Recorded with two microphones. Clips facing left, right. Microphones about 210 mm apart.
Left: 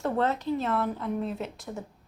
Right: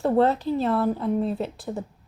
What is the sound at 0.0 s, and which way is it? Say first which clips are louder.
A woman's voice: right 7 dB; 35° right (ahead or behind).